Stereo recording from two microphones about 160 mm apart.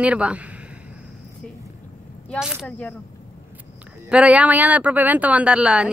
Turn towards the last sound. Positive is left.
turn(degrees=-5)  # may be behind; listen again after turning